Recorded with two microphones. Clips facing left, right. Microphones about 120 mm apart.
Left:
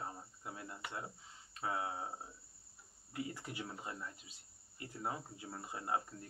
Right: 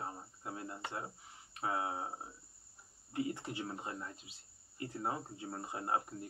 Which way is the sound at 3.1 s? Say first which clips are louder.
Right 5 dB; 25° right (ahead or behind).